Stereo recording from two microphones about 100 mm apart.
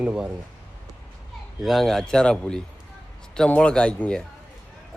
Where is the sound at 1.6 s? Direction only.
Centre (ahead or behind).